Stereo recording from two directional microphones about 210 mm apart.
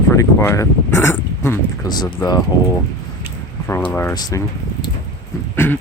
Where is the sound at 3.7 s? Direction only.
10° left (ahead or behind).